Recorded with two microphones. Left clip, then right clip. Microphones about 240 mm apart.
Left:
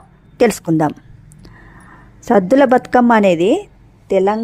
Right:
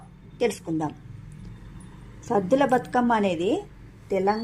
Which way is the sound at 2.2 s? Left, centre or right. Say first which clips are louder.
Left 10 dB; left.